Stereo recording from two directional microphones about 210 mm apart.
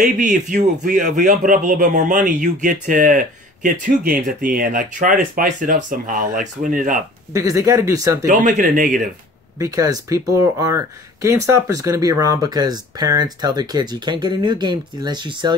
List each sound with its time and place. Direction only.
0.0 s speech: 35° right (ahead or behind)
7.3 s speech: 15° right (ahead or behind)
8.3 s speech: 35° right (ahead or behind)
9.6 s speech: 15° right (ahead or behind)